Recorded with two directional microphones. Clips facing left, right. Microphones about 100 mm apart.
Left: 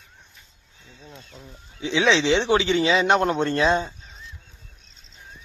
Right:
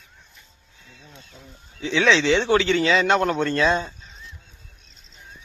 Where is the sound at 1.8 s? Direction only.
20° left (ahead or behind).